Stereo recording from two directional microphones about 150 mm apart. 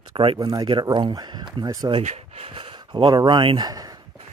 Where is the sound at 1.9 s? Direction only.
45° right (ahead or behind); by 4.0 s 25° right (ahead or behind).